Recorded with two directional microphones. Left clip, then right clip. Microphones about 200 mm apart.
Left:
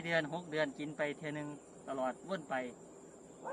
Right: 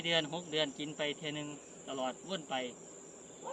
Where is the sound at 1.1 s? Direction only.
40° left (ahead or behind).